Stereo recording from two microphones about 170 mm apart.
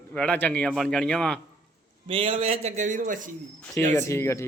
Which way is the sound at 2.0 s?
30° right (ahead or behind).